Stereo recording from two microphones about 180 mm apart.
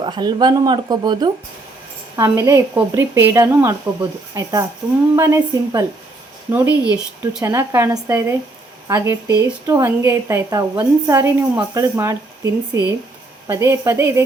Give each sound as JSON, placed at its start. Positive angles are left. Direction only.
{"t": 0.0, "sound": "a woman's voice", "side_deg": -25}